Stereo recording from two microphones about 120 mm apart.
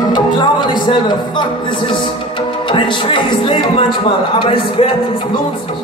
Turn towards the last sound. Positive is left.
turn(degrees=50)  # may be behind; listen again after turning